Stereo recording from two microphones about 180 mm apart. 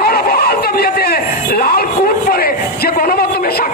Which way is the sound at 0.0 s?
55° left (ahead or behind).